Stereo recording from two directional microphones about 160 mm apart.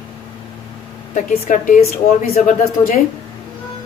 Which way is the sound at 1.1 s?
55° left (ahead or behind).